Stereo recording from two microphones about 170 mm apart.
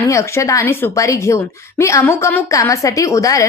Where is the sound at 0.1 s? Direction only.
15° left (ahead or behind).